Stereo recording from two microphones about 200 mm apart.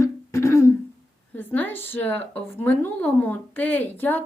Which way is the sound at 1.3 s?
10° left (ahead or behind).